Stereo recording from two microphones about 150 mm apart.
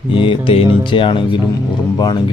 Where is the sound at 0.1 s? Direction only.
35° left (ahead or behind).